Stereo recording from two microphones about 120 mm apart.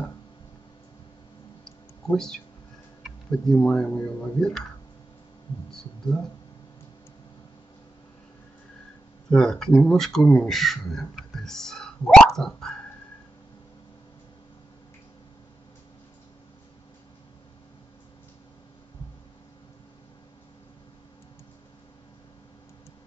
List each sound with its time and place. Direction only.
1.6 s a sound: 5° left (ahead or behind)
3.0 s speech: 5° left (ahead or behind)
5.7 s speech: 5° left (ahead or behind)
9.3 s speech: 5° left (ahead or behind)